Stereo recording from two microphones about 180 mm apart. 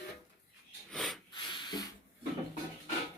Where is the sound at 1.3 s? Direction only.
25° left (ahead or behind).